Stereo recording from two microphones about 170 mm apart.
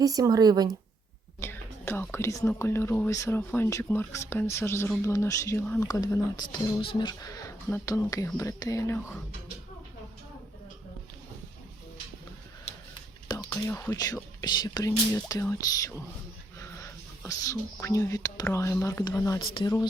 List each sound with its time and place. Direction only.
0.0 s speech: 20° right (ahead or behind)
1.4 s speech: 15° left (ahead or behind)
5.9 s speech: 20° left (ahead or behind)
13.2 s whispering: 20° left (ahead or behind)
13.5 s speech: 10° left (ahead or behind)
17.2 s speech: 20° left (ahead or behind)